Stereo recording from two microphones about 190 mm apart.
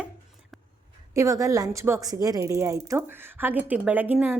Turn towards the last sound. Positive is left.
turn(degrees=-10)  # may be behind; listen again after turning